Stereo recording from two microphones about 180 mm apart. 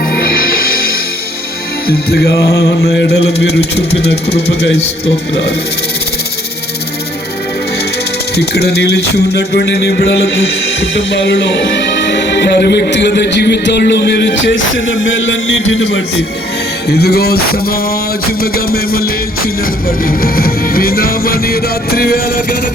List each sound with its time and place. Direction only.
0.1 s music: 55° left (ahead or behind)
8.4 s music: 65° left (ahead or behind)
10.9 s speech: 85° left
16.9 s music: 60° left (ahead or behind)
20.1 s music: 55° left (ahead or behind)